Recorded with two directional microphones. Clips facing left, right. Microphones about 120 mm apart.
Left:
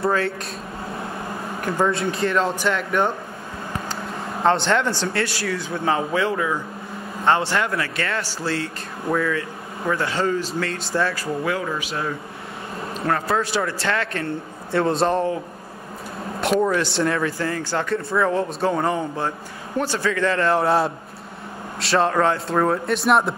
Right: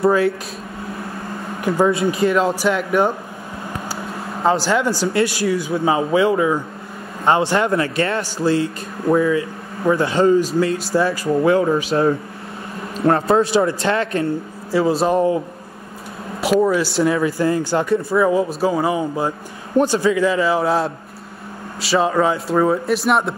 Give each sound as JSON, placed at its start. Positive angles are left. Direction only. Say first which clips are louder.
{"t": 1.6, "sound": "speech", "louder": "right 5 dB", "side_deg": -5}
{"t": 11.2, "sound": "a man's voice", "louder": "right 9 dB", "side_deg": -30}
{"t": 14.7, "sound": "speech", "louder": "right 3 dB", "side_deg": -5}
{"t": 16.3, "sound": "speech", "louder": "right 4 dB", "side_deg": -5}